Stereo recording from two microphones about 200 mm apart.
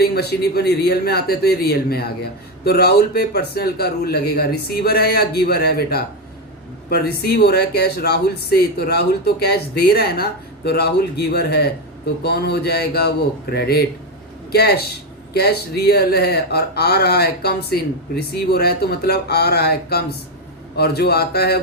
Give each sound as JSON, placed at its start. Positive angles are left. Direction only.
{"t": 0.0, "sound": "speech", "side_deg": 50}